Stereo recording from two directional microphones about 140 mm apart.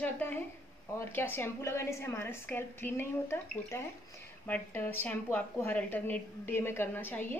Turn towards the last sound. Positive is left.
turn(degrees=15)  # may be behind; listen again after turning